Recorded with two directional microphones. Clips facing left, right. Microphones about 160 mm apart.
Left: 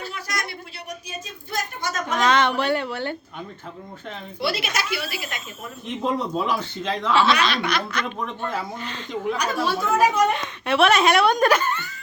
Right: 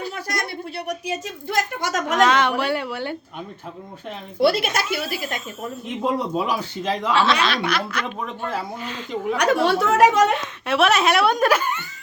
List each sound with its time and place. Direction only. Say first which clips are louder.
0.9 s a woman's voice: right 7 dB; 75° right (ahead or behind)
2.2 s speech: even; 10° right (ahead or behind)
4.4 s speech: right 7 dB; 50° right (ahead or behind)
6.0 s speech: right 1 dB; 10° right (ahead or behind)
7.1 s a woman's voice: left 1 dB; centre (ahead or behind)
9.3 s speech: right 7 dB; 75° right (ahead or behind)
10.3 s a woman's voice: even; centre (ahead or behind)